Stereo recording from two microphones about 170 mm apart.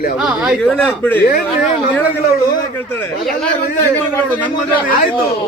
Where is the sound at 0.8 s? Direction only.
10° left (ahead or behind).